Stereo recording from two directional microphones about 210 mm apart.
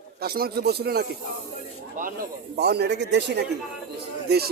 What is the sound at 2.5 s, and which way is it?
A man's voice, 50° right (ahead or behind).